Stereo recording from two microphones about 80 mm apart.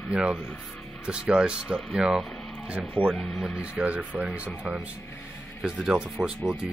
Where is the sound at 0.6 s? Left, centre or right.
Centre.